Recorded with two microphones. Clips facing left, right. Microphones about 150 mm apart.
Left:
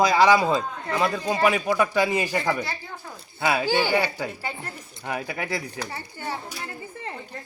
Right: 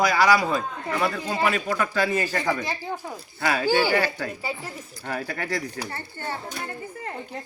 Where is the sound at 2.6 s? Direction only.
20° right (ahead or behind).